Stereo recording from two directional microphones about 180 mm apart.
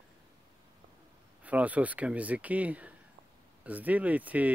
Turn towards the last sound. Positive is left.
turn(degrees=-10)  # may be behind; listen again after turning